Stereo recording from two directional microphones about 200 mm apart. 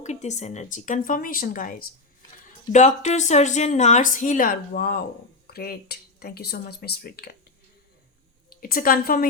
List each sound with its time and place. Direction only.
0.0 s a woman's voice: 35° left (ahead or behind); by 7.3 s 50° left (ahead or behind)
8.6 s speech: 45° left (ahead or behind)